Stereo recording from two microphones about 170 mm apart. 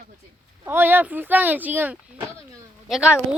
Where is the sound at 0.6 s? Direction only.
10° right (ahead or behind).